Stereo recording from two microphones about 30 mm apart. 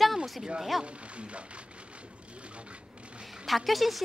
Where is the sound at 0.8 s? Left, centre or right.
Right.